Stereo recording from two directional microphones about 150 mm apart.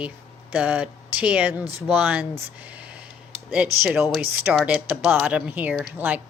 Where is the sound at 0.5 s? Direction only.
10° right (ahead or behind).